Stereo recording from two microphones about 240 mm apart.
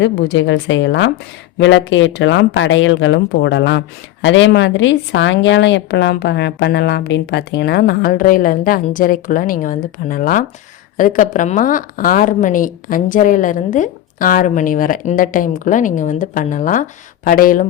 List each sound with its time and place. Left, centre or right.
0.0 s a woman's voice: left